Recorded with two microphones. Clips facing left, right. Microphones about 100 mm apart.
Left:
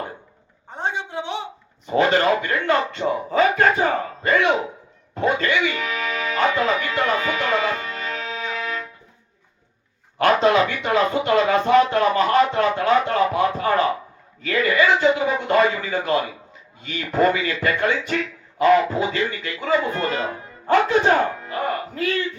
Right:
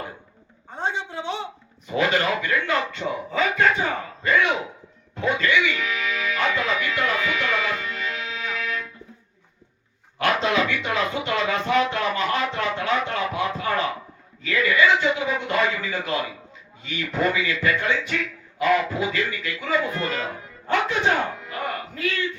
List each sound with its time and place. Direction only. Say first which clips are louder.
0.7 s a sound: left 1 dB; 15° left (ahead or behind)
1.9 s speech: left 5 dB; 35° left (ahead or behind)
5.1 s music: left 1 dB; 40° left (ahead or behind)
10.2 s speech: left 5 dB; 40° left (ahead or behind)